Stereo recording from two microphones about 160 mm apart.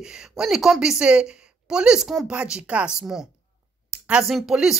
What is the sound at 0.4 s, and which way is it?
Speech, centre (ahead or behind).